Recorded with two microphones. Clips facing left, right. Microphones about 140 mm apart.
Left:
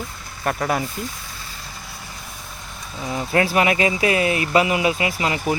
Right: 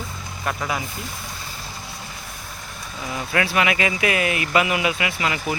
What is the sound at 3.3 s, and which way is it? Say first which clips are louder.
Speech: left 3 dB; 35° left (ahead or behind).